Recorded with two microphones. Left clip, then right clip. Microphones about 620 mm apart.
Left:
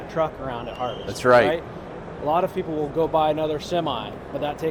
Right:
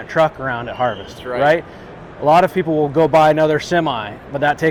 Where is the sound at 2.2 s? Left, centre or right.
Right.